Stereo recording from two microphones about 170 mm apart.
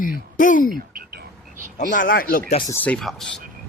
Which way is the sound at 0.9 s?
55° right (ahead or behind).